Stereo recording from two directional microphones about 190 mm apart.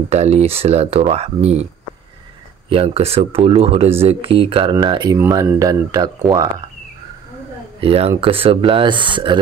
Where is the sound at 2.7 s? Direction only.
30° right (ahead or behind).